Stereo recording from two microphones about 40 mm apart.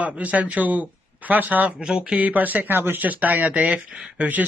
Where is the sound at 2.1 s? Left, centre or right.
Right.